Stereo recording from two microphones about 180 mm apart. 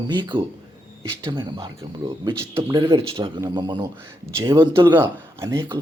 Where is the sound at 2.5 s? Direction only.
15° right (ahead or behind).